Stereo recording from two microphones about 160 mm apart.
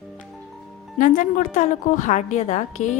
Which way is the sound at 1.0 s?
55° left (ahead or behind).